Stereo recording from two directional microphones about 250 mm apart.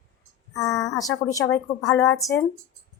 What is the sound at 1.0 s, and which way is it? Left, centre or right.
Speech, centre.